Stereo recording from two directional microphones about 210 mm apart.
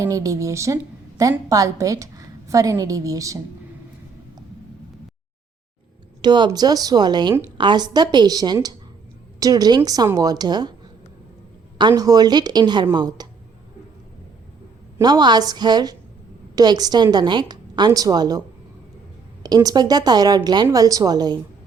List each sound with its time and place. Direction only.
0.0 s a woman's voice: 15° right (ahead or behind)
6.2 s speech: 20° right (ahead or behind)
11.8 s speech: 20° right (ahead or behind)
14.9 s speech: 20° right (ahead or behind)